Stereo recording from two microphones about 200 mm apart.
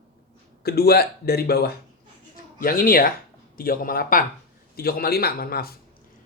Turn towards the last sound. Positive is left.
turn(degrees=50)  # may be behind; listen again after turning